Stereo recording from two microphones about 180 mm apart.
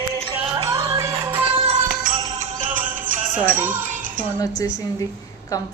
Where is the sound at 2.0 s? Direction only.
45° right (ahead or behind).